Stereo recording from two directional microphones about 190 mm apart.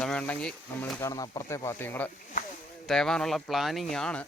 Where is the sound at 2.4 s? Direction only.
45° left (ahead or behind).